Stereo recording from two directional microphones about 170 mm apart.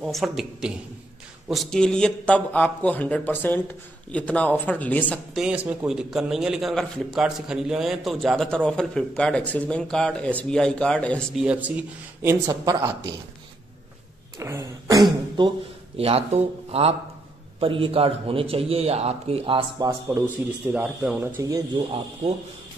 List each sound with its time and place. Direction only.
0.0 s a man's voice: centre (ahead or behind)
5.1 s a man's voice: centre (ahead or behind)
11.4 s speech: 10° right (ahead or behind)
14.4 s a man's voice: 15° right (ahead or behind)
20.7 s speech: 10° right (ahead or behind)
21.4 s speech: 20° right (ahead or behind)